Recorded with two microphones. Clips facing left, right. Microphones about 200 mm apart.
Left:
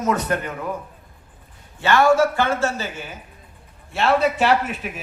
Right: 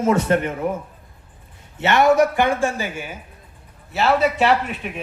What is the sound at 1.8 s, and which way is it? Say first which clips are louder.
A man's voice: right 1 dB; 20° right (ahead or behind).